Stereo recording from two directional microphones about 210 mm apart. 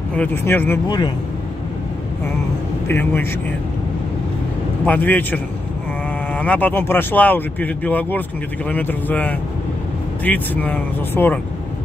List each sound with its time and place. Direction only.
0.1 s speech: 10° left (ahead or behind)
0.8 s speech: 20° left (ahead or behind)
2.9 s speech: 10° left (ahead or behind)
4.8 s speech: 10° left (ahead or behind)